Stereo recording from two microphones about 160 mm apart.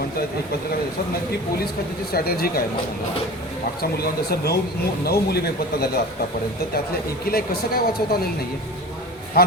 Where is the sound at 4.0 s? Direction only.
80° left.